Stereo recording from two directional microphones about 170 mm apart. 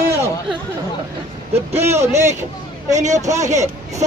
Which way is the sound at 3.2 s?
20° right (ahead or behind).